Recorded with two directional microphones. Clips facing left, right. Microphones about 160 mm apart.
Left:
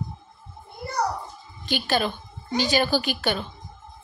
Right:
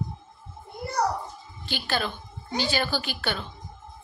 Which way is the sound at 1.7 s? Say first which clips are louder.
Left 5 dB; 15° left (ahead or behind).